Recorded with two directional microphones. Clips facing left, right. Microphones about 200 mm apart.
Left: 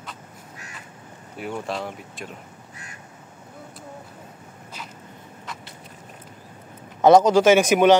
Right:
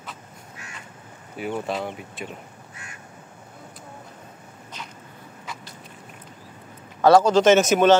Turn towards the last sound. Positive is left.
turn(degrees=15)  # may be behind; listen again after turning